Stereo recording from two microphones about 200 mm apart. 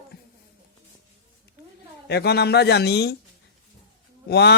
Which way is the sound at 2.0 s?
55° left (ahead or behind).